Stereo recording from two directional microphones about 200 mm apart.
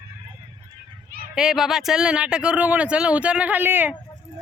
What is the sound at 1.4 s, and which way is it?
Speech, 5° right (ahead or behind).